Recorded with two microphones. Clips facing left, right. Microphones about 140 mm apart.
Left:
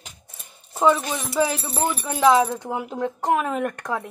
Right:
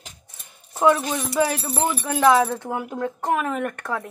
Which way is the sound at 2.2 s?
15° left (ahead or behind).